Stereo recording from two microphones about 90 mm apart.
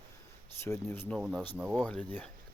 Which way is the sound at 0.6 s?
30° left (ahead or behind).